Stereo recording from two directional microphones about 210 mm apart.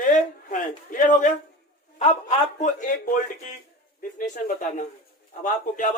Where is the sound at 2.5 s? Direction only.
35° left (ahead or behind).